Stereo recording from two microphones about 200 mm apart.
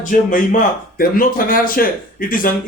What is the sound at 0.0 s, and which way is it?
Speech, 40° left (ahead or behind).